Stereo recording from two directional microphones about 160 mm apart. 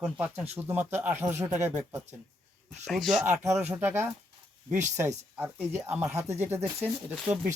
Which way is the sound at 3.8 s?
15° right (ahead or behind).